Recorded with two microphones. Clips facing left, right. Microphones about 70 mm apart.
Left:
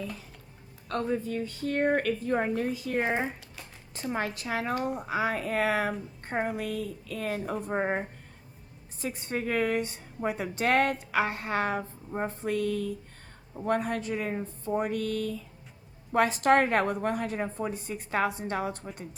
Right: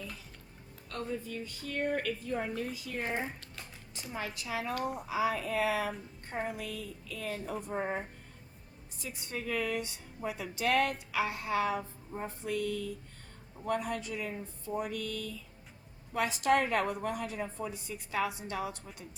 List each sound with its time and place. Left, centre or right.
0.9 s a woman's voice: left
3.0 s speech: left
3.9 s a woman's voice: left
6.6 s a woman's voice: left
9.0 s a woman's voice: left